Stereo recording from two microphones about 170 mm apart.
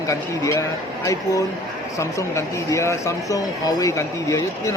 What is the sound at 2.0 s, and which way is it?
Speech, 15° left (ahead or behind).